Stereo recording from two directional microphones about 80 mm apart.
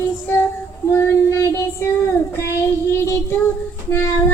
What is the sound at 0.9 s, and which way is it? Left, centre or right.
Child singing, left.